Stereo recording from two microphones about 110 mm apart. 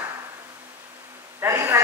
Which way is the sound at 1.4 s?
25° right (ahead or behind).